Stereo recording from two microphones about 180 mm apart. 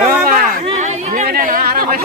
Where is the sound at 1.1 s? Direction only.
50° right (ahead or behind).